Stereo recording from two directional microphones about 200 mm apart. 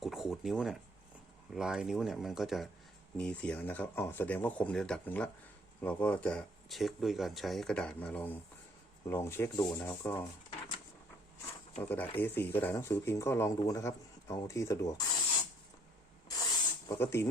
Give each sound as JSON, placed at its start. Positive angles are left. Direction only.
{"t": 0.0, "sound": "a sound", "side_deg": 0}
{"t": 1.5, "sound": "speech", "side_deg": -5}
{"t": 11.8, "sound": "speech", "side_deg": 10}
{"t": 16.3, "sound": "snake", "side_deg": 20}